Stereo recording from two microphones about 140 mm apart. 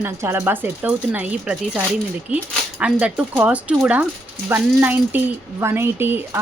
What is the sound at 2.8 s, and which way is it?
Speech, 10° right (ahead or behind).